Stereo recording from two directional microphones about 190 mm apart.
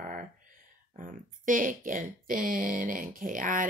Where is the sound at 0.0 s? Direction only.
45° right (ahead or behind).